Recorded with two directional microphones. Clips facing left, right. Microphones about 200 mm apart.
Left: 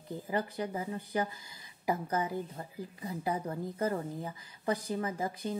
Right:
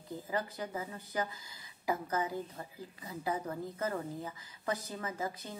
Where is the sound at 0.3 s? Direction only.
20° left (ahead or behind).